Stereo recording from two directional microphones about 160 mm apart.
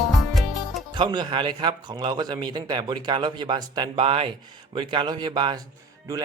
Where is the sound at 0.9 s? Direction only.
30° right (ahead or behind).